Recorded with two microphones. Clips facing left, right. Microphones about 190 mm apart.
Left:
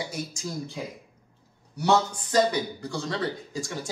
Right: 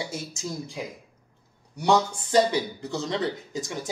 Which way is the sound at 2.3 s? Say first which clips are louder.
Right 2 dB; 25° right (ahead or behind).